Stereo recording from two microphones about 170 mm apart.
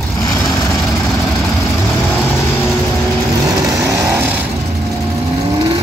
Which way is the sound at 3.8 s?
20° right (ahead or behind).